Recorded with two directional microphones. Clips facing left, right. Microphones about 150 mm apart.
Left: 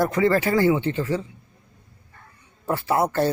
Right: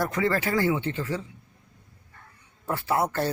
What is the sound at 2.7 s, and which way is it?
Speech, 25° left (ahead or behind).